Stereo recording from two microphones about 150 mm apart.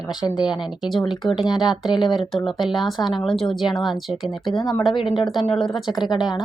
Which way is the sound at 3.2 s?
Centre (ahead or behind).